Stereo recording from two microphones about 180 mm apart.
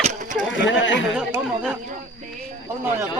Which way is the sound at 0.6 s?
90° left.